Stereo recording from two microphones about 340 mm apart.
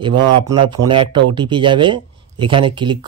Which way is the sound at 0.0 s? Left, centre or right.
Centre.